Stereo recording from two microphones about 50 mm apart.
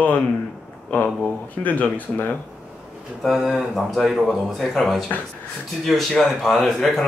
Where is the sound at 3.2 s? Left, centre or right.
Centre.